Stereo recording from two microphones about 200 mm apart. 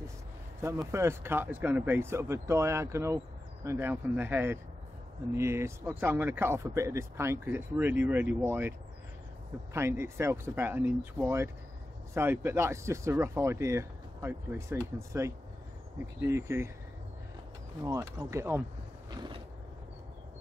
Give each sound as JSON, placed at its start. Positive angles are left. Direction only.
{"t": 0.6, "sound": "speech", "side_deg": -15}
{"t": 9.8, "sound": "speech", "side_deg": -15}
{"t": 17.8, "sound": "speech", "side_deg": -15}
{"t": 19.0, "sound": "a sound", "side_deg": -20}